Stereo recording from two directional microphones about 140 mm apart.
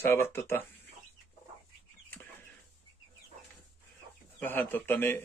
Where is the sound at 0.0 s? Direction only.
15° left (ahead or behind).